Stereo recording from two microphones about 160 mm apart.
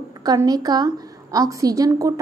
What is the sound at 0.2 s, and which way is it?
A woman's voice, 25° right (ahead or behind).